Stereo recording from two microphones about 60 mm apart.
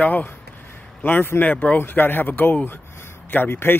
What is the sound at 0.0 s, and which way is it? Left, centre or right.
A man's voice, left.